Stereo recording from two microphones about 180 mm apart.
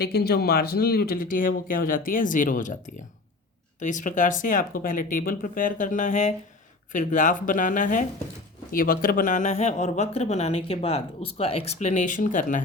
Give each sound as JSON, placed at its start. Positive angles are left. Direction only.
{"t": 0.0, "sound": "speech", "side_deg": 60}